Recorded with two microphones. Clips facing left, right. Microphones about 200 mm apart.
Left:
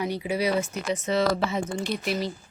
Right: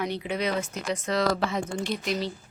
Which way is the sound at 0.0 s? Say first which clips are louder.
Left 2 dB; 10° left (ahead or behind).